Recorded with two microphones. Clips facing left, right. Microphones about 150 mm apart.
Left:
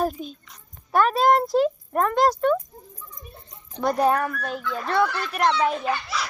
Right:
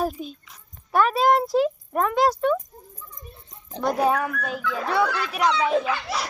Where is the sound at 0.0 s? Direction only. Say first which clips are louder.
Left 1 dB; centre (ahead or behind).